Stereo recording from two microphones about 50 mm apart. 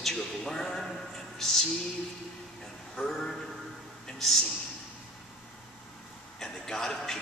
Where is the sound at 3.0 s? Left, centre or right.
Centre.